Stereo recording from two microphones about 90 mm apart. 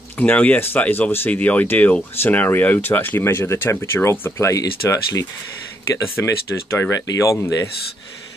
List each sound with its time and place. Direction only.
0.2 s speech: 15° left (ahead or behind); by 7.3 s 40° left (ahead or behind)